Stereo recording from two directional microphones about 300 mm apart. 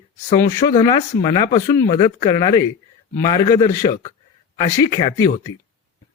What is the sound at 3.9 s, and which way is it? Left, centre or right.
Speech, left.